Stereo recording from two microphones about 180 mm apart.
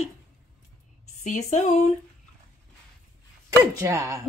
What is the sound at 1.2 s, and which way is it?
Speech, 40° left (ahead or behind).